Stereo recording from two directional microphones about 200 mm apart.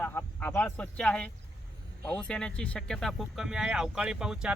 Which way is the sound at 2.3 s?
5° left (ahead or behind).